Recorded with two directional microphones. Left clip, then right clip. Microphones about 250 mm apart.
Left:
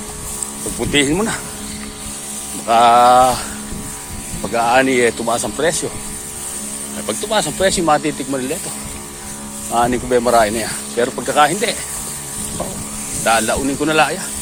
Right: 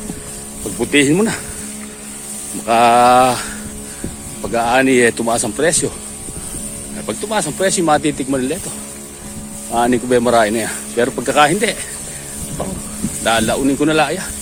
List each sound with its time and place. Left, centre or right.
0.8 s speech: right
2.6 s speech: right
4.5 s speech: right
7.1 s speech: right
9.7 s speech: right
13.2 s speech: right